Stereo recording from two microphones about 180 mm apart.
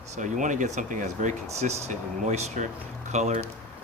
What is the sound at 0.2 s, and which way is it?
Speech, 45° right (ahead or behind).